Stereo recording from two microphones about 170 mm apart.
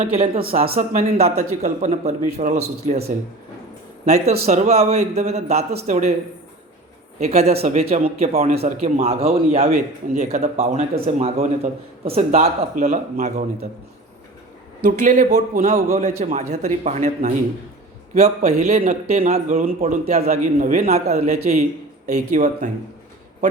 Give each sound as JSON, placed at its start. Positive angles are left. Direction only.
{"t": 0.0, "sound": "speech", "side_deg": -60}
{"t": 1.2, "sound": "speech", "side_deg": -40}
{"t": 4.0, "sound": "speech", "side_deg": -40}
{"t": 7.2, "sound": "speech", "side_deg": -40}
{"t": 14.8, "sound": "speech", "side_deg": -50}